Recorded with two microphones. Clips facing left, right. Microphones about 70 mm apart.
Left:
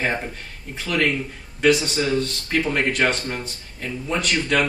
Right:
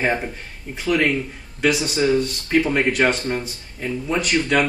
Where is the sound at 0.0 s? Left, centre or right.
Centre.